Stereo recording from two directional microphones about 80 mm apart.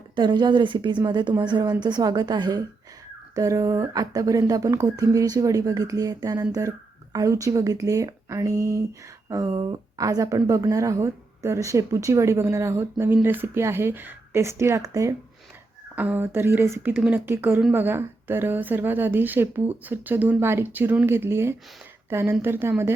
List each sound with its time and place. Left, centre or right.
0.2 s a woman's voice: right
3.3 s a woman's voice: right
16.0 s a woman's voice: right